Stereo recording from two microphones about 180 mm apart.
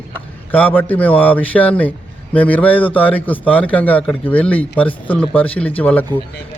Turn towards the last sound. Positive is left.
turn(degrees=10)  # may be behind; listen again after turning